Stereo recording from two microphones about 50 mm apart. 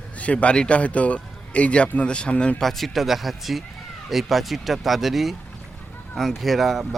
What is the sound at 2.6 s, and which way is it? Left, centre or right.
Speech, centre.